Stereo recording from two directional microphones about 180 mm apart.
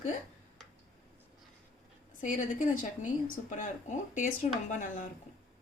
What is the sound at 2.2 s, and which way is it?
A woman's voice, 45° left (ahead or behind).